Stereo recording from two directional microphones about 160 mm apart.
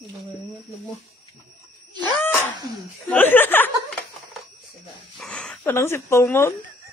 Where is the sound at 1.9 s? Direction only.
25° right (ahead or behind).